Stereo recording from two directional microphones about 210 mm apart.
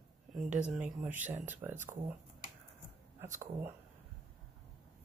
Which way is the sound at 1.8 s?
40° right (ahead or behind).